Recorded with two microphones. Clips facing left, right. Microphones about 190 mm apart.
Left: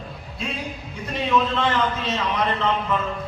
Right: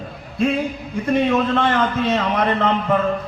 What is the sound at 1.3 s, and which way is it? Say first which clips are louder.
A man's voice: right 4 dB; 55° right (ahead or behind).